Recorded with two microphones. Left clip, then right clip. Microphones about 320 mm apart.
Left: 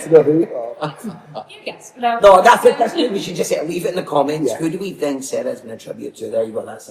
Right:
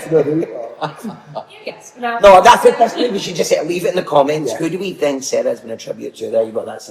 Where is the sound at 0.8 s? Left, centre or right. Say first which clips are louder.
Right 2 dB; centre.